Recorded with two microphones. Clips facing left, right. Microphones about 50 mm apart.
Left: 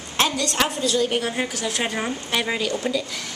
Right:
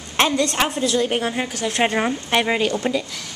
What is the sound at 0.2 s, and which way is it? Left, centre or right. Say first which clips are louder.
A woman's voice: right 3 dB; right.